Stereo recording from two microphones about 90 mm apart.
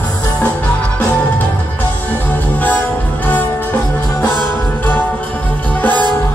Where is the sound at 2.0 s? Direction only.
20° left (ahead or behind).